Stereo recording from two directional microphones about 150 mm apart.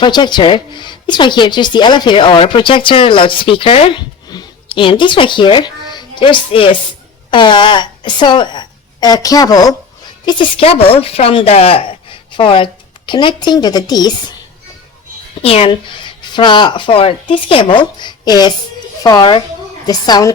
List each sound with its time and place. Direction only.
0.0 s a woman's voice: 30° left (ahead or behind)
15.4 s a woman's voice: 40° left (ahead or behind)